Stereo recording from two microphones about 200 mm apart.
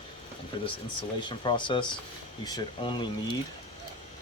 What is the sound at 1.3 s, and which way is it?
Speech, 25° left (ahead or behind).